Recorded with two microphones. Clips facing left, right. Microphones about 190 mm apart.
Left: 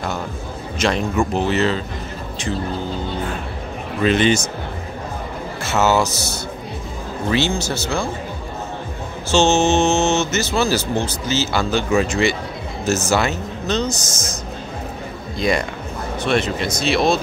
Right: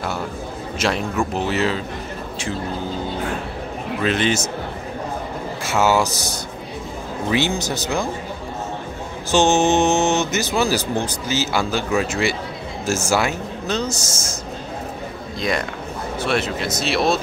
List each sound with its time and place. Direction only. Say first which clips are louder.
0.7 s speech: left 3 dB; 5° right (ahead or behind)
4.0 s speech: left 4 dB; centre (ahead or behind)
5.6 s speech: left 1 dB; 10° right (ahead or behind)
9.3 s speech: left 1 dB; 15° right (ahead or behind)
16.2 s speech: left 2 dB; 5° right (ahead or behind)